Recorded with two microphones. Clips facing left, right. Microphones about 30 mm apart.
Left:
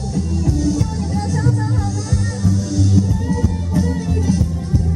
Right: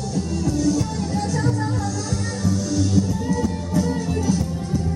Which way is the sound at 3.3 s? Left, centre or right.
Centre.